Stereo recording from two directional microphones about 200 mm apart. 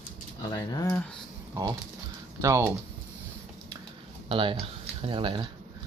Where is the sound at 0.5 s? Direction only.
15° left (ahead or behind).